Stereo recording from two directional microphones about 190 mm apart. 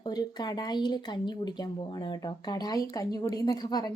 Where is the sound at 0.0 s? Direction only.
20° left (ahead or behind).